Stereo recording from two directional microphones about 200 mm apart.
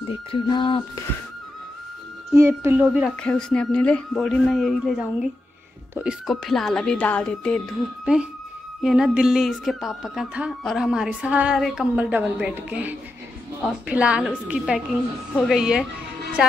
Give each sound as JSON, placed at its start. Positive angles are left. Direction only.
{"t": 0.1, "sound": "speech", "side_deg": 25}
{"t": 2.3, "sound": "speech", "side_deg": -15}
{"t": 3.2, "sound": "speech", "side_deg": 5}
{"t": 8.0, "sound": "speech", "side_deg": -5}